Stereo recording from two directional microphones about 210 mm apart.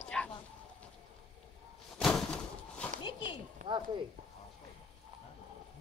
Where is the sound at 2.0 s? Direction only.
5° left (ahead or behind).